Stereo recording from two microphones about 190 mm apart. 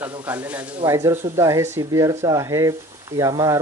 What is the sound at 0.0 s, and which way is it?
Speech, 10° right (ahead or behind).